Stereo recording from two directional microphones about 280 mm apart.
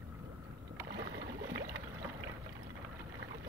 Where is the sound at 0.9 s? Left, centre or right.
Right.